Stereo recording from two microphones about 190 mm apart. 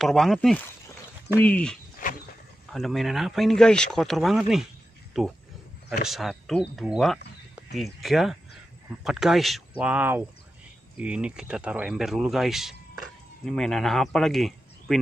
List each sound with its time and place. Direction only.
0.0 s speech: centre (ahead or behind)